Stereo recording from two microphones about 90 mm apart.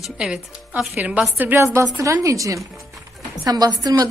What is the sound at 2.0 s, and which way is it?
A woman's voice, 35° right (ahead or behind).